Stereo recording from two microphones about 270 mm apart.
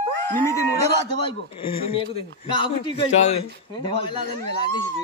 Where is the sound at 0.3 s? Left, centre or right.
Centre.